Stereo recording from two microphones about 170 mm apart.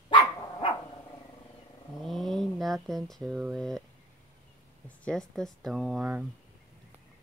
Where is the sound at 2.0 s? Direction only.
Centre (ahead or behind).